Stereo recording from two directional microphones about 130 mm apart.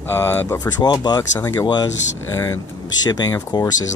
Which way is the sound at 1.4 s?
20° left (ahead or behind).